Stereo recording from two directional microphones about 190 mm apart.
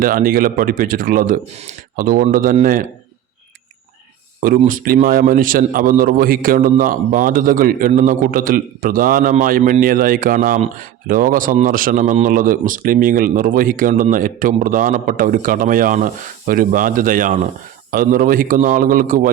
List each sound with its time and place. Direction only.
0.0 s a man's voice: 50° right (ahead or behind)
4.4 s a man's voice: 45° right (ahead or behind)